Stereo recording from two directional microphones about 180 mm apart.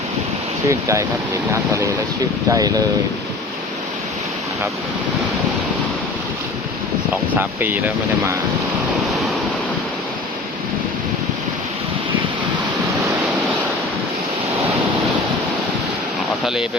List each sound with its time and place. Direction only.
0.7 s speech: 15° right (ahead or behind)
2.5 s speech: 20° right (ahead or behind)
7.3 s speech: 10° right (ahead or behind)